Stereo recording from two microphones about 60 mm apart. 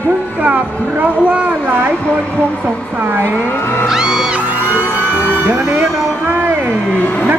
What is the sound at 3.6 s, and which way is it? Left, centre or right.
Music, left.